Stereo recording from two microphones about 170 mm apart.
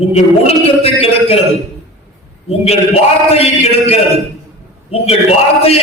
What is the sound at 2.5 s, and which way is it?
Music, 35° left (ahead or behind).